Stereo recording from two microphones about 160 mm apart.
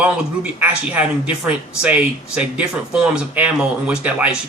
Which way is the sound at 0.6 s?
5° right (ahead or behind).